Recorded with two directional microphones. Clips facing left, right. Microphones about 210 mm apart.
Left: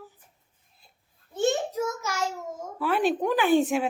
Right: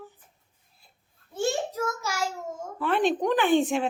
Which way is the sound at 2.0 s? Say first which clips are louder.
Even; 10° right (ahead or behind).